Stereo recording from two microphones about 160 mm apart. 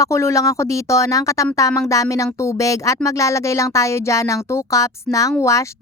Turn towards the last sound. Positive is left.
turn(degrees=20)  # may be behind; listen again after turning